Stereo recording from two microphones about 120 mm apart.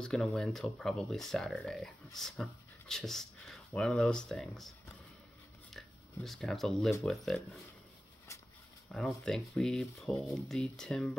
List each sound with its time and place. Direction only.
0.0 s speech: 5° left (ahead or behind)
5.7 s shuffling cards: centre (ahead or behind)
7.0 s speech: 5° left (ahead or behind)
8.9 s speech: 5° left (ahead or behind)